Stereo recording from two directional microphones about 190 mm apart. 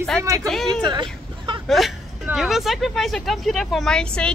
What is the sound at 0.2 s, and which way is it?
Speech, 15° right (ahead or behind).